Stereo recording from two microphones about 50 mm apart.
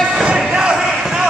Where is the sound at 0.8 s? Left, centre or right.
Centre.